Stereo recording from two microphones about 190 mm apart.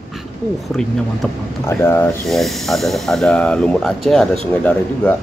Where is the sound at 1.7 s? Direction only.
15° left (ahead or behind).